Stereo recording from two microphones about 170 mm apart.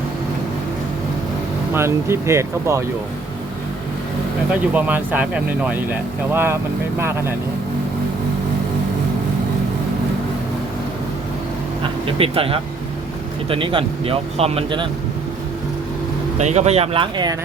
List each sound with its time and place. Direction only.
1.7 s speech: 15° right (ahead or behind)
4.7 s speech: 10° right (ahead or behind)
11.8 s speech: 30° right (ahead or behind)
16.4 s speech: 40° right (ahead or behind)